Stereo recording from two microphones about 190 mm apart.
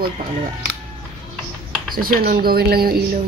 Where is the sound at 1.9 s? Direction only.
50° right (ahead or behind).